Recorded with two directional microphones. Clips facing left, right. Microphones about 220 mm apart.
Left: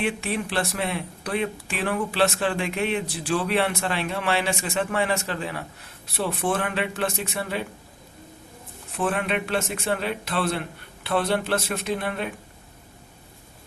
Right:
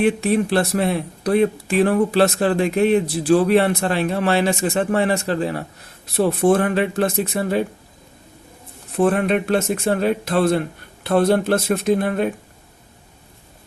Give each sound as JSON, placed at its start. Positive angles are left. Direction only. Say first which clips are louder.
{"t": 0.0, "sound": "speech", "louder": "right 9 dB", "side_deg": -40}
{"t": 9.0, "sound": "speech", "louder": "right 8 dB", "side_deg": -40}